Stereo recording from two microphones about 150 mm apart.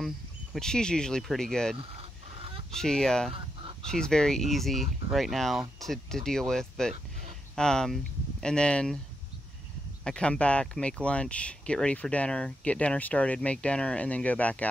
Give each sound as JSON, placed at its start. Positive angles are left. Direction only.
{"t": 0.6, "sound": "speech", "side_deg": 5}
{"t": 1.8, "sound": "fowl", "side_deg": -40}
{"t": 2.7, "sound": "speech", "side_deg": 5}
{"t": 3.3, "sound": "chicken", "side_deg": -35}
{"t": 3.9, "sound": "speech", "side_deg": 5}
{"t": 10.0, "sound": "speech", "side_deg": 5}